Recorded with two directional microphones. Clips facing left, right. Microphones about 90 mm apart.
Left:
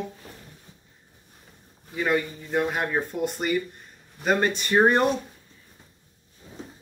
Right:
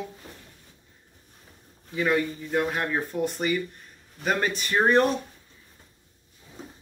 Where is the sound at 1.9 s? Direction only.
5° left (ahead or behind).